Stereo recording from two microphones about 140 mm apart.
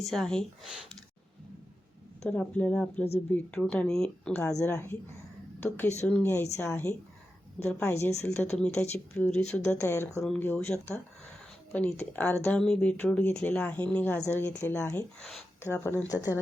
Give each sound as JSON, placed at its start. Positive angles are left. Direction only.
{"t": 0.0, "sound": "speech", "side_deg": 0}
{"t": 2.2, "sound": "speech", "side_deg": 10}
{"t": 6.2, "sound": "speech", "side_deg": 20}
{"t": 7.9, "sound": "speech", "side_deg": 20}
{"t": 8.2, "sound": "speech", "side_deg": 5}